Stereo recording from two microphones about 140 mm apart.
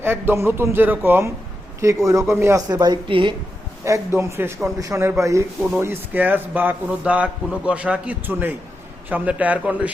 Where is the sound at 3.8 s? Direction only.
20° right (ahead or behind).